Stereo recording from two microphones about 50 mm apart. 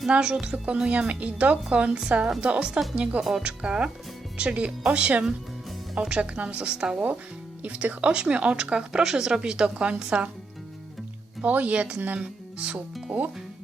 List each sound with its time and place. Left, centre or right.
0.1 s speech: centre
9.6 s speech: right
11.4 s speech: right